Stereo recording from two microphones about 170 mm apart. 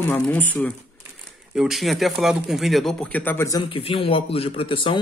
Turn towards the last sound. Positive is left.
turn(degrees=30)  # may be behind; listen again after turning